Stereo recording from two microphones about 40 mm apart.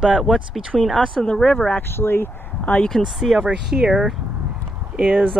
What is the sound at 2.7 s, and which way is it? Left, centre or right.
Speech, left.